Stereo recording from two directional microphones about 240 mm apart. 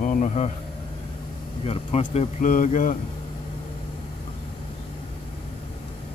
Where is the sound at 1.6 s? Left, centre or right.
Left.